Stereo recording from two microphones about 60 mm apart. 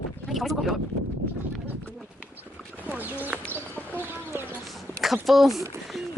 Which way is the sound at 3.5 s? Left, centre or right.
Right.